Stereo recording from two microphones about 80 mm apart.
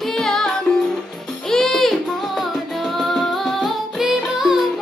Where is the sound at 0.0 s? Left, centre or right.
Centre.